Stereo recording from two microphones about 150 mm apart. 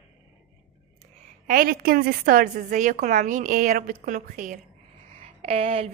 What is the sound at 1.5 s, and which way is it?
A woman's voice, 75° right (ahead or behind).